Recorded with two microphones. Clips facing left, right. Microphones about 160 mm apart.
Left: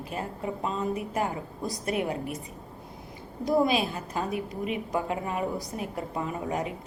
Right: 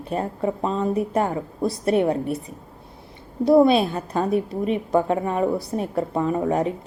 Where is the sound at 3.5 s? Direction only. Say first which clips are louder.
Right 9 dB; 35° right (ahead or behind).